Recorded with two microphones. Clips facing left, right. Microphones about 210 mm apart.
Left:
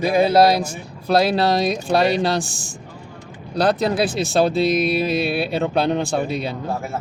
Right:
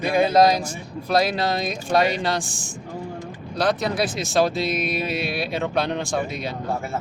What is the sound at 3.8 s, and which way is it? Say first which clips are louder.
Speech: left 4 dB; 30° left (ahead or behind).